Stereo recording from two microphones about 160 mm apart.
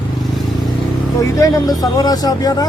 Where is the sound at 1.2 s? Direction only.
20° left (ahead or behind).